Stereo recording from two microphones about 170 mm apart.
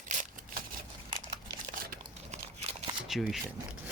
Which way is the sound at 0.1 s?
50° right (ahead or behind).